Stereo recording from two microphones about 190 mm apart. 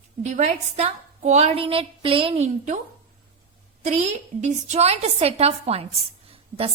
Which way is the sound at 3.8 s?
35° right (ahead or behind).